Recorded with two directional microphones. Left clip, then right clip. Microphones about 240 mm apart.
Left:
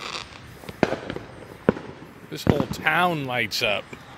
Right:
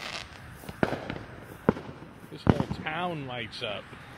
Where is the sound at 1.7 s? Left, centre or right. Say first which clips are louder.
Left 4 dB; left.